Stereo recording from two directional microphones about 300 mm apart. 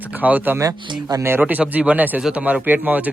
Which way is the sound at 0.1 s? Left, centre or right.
Centre.